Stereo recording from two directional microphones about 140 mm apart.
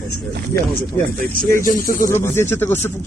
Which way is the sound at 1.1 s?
90° right.